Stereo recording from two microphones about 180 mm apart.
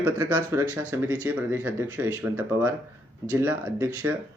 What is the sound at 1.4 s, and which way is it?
Speech, 10° right (ahead or behind).